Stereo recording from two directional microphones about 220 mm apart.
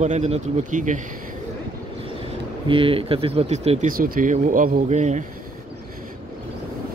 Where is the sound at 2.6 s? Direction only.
25° right (ahead or behind).